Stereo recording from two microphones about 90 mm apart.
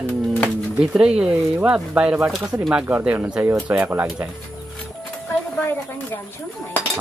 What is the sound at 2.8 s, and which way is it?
Speech, 15° right (ahead or behind).